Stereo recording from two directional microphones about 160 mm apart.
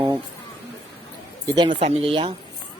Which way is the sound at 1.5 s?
30° right (ahead or behind).